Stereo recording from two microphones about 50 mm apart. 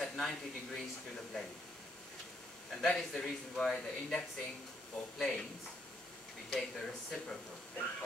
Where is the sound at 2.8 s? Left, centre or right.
Centre.